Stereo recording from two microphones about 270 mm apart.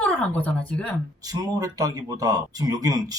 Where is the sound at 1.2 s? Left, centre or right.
Centre.